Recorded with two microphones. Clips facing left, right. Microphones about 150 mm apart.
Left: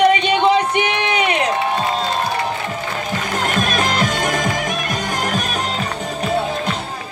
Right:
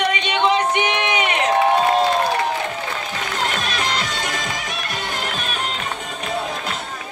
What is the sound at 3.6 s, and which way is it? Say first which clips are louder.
Music: left 6 dB; 45° left (ahead or behind).